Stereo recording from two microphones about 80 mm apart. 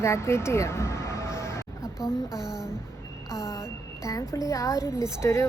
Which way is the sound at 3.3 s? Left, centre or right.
Left.